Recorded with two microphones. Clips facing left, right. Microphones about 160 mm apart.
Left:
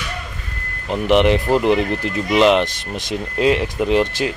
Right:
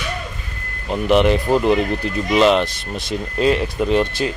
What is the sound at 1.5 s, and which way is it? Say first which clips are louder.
Speech: even; 20° left (ahead or behind).